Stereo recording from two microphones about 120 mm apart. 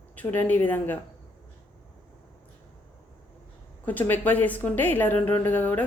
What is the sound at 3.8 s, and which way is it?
A woman's voice, 15° left (ahead or behind).